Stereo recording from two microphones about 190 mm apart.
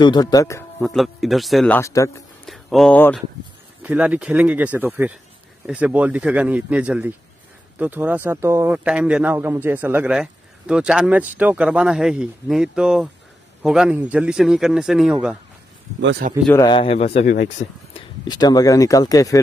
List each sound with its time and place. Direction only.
0.0 s speech: 20° left (ahead or behind)
0.8 s a man's voice: centre (ahead or behind)
1.8 s speech: 15° left (ahead or behind)
2.4 s speech: centre (ahead or behind)
3.8 s a man's voice: 5° right (ahead or behind)
16.0 s speech: 70° right (ahead or behind)
16.6 s speech: 30° left (ahead or behind)
17.3 s speech: 45° left (ahead or behind)
17.9 s speech: 25° left (ahead or behind)